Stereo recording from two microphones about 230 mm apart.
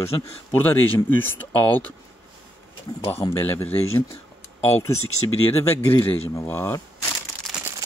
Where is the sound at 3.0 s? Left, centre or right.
Centre.